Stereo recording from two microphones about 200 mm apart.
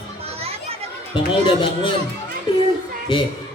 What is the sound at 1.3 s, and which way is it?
Speech, 25° left (ahead or behind).